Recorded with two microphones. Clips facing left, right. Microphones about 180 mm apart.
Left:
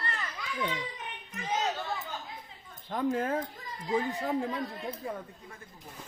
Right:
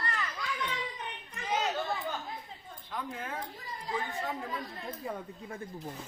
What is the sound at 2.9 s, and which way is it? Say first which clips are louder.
Speech: left 10 dB; 45° left (ahead or behind).